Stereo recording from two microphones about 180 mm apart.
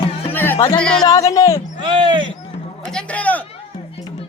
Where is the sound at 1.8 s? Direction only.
25° right (ahead or behind).